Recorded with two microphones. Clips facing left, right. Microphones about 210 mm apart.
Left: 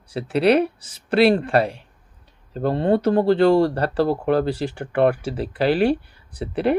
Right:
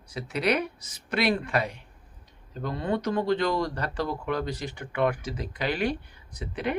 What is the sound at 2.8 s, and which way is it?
Speech, 30° left (ahead or behind).